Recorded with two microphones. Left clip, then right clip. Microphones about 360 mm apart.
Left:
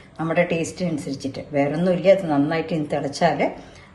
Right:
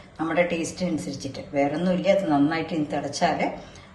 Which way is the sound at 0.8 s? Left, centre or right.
Centre.